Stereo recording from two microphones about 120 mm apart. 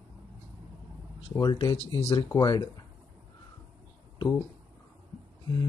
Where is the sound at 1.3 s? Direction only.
30° left (ahead or behind).